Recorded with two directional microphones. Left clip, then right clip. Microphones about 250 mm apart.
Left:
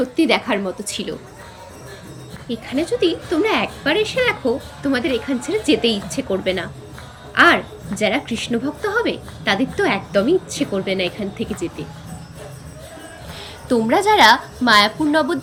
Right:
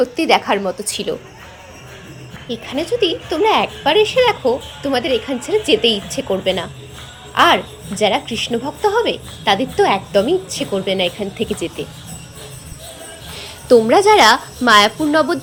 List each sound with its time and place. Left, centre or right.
0.0 s a woman's voice: centre
2.6 s a woman's voice: centre
13.4 s a woman's voice: centre